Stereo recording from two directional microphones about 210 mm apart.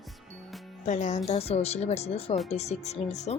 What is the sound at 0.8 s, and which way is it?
Speech, 35° left (ahead or behind).